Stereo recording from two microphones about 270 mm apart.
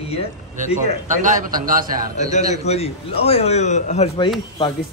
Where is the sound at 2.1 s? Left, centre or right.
Left.